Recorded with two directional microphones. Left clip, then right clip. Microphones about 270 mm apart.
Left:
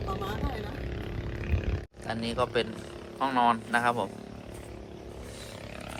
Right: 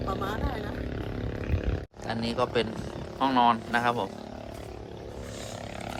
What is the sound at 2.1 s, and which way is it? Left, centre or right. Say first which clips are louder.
Speech: right 1 dB; centre.